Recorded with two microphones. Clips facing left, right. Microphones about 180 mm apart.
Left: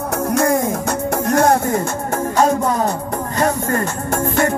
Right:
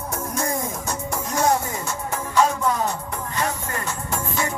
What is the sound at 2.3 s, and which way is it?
Music, 40° left (ahead or behind).